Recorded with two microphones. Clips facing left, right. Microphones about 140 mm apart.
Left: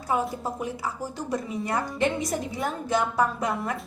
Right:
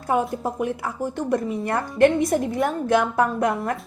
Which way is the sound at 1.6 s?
55° right (ahead or behind).